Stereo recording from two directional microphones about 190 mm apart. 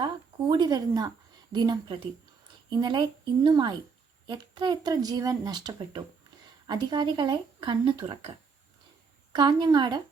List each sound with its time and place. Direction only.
0.0 s speech: 25° right (ahead or behind)
9.3 s speech: 20° right (ahead or behind)